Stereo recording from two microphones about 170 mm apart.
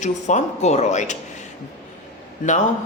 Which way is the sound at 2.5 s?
45° left (ahead or behind).